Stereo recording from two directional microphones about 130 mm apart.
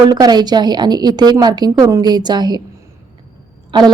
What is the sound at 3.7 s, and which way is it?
Speech, 35° right (ahead or behind).